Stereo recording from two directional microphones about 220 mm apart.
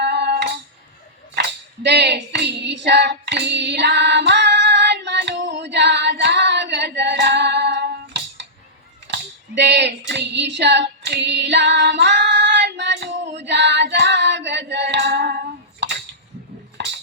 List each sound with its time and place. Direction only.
0.0 s music: 50° right (ahead or behind)
1.8 s child singing: 50° right (ahead or behind)
9.0 s a sound: 50° right (ahead or behind)
10.1 s female singing: 50° right (ahead or behind)